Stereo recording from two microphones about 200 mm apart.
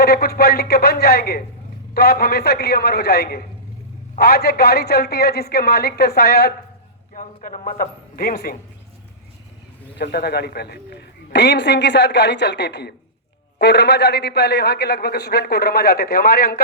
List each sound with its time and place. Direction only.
0.0 s speech: 50° left (ahead or behind)
7.1 s a man's voice: 40° left (ahead or behind)
10.0 s a man's voice: 55° left (ahead or behind)